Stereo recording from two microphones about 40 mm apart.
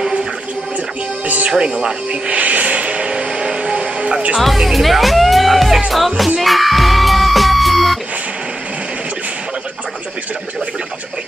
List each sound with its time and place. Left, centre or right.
1.2 s music: right
1.5 s speech: centre
2.3 s music: right
4.4 s speech: centre
6.4 s music: centre